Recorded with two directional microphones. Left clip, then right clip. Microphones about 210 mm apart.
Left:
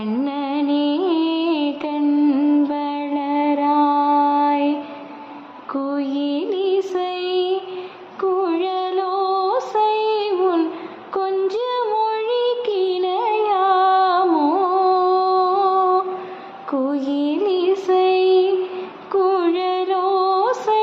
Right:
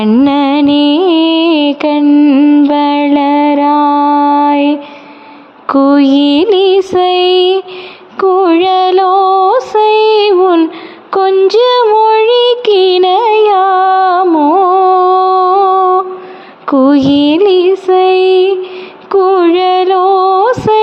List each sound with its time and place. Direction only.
0.0 s music: 45° right (ahead or behind)
5.6 s mantra: 50° right (ahead or behind)
8.2 s music: 45° right (ahead or behind)
16.6 s mantra: 45° right (ahead or behind)
19.1 s music: 40° right (ahead or behind)